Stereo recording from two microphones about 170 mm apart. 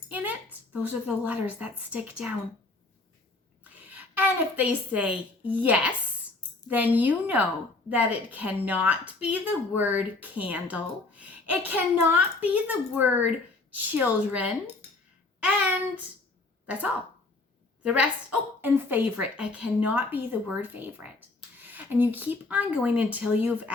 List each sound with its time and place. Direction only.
0.1 s a sound: 10° right (ahead or behind)
0.5 s a woman's voice: 10° right (ahead or behind)
3.6 s a woman's voice: 10° right (ahead or behind)
17.8 s a woman's voice: 5° right (ahead or behind)